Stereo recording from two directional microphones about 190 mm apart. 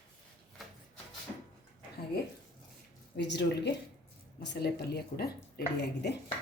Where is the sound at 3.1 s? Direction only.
65° left (ahead or behind).